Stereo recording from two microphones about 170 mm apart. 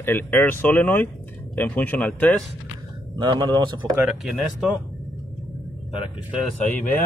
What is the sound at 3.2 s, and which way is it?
Speech, 25° right (ahead or behind).